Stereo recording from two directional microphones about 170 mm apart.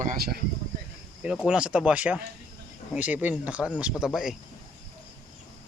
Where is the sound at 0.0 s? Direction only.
55° right (ahead or behind).